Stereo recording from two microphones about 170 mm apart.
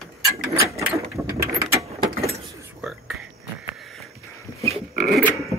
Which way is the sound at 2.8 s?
5° right (ahead or behind).